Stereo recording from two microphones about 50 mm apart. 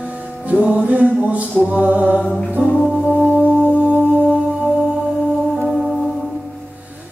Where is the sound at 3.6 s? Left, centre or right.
Right.